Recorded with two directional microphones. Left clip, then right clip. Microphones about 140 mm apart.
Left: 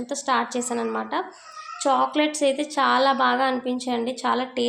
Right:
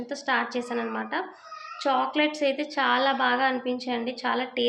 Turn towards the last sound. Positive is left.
turn(degrees=40)  # may be behind; listen again after turning